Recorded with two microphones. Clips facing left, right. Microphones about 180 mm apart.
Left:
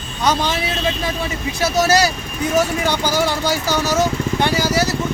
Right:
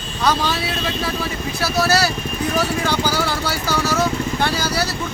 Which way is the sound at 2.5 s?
20° left (ahead or behind).